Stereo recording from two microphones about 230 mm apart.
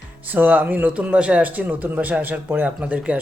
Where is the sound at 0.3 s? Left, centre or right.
Centre.